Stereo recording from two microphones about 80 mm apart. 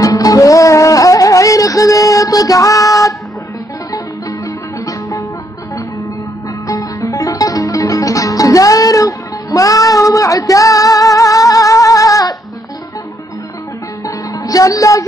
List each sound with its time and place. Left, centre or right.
0.0 s music: left
6.7 s music: left
14.0 s music: left